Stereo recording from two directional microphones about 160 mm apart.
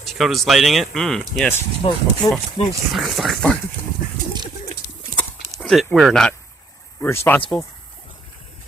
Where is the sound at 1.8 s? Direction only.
35° left (ahead or behind).